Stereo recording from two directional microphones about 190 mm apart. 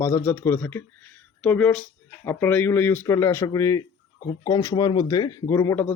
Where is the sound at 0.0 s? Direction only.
10° left (ahead or behind).